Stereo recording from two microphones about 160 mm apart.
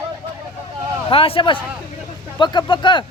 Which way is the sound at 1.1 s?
35° left (ahead or behind).